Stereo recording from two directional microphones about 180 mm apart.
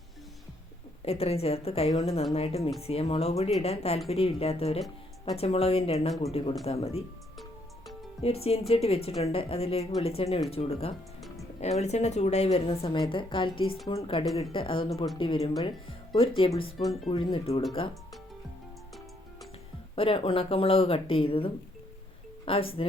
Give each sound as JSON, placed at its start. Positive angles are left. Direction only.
{"t": 1.0, "sound": "a woman's voice", "side_deg": 35}
{"t": 8.2, "sound": "a woman's voice", "side_deg": 35}
{"t": 16.7, "sound": "speech", "side_deg": 0}
{"t": 17.3, "sound": "a woman's voice", "side_deg": 35}
{"t": 20.0, "sound": "a woman's voice", "side_deg": 30}